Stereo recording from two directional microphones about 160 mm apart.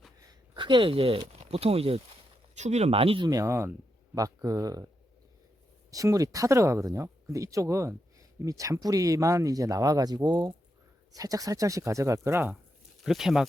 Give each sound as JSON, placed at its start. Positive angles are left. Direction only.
{"t": 0.2, "sound": "speech", "side_deg": -25}
{"t": 3.2, "sound": "speech", "side_deg": -20}
{"t": 5.9, "sound": "speech", "side_deg": -20}
{"t": 13.1, "sound": "speech", "side_deg": 0}